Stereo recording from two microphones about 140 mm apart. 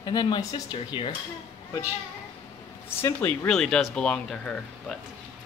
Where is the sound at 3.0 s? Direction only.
20° left (ahead or behind).